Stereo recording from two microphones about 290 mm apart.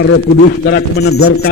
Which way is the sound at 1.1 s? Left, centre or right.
Left.